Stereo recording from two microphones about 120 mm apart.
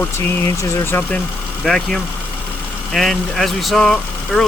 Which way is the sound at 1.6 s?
Centre (ahead or behind).